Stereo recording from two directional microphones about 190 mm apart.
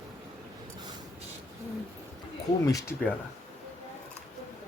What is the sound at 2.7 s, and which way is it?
Speech, 20° left (ahead or behind).